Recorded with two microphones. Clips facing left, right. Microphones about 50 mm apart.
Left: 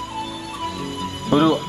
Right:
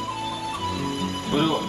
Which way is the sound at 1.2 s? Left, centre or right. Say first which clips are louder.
Left 7 dB; left.